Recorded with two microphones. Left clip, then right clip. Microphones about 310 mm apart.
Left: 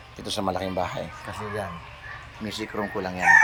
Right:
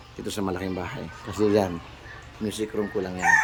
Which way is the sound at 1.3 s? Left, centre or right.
Right.